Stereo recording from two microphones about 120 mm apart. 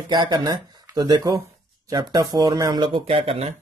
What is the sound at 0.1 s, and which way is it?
Speech, 40° right (ahead or behind).